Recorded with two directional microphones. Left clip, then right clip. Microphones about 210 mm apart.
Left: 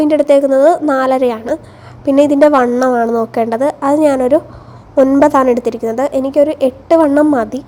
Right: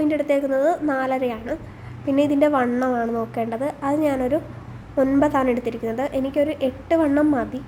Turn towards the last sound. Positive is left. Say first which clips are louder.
# left 9 dB
turn(degrees=30)  # may be behind; listen again after turning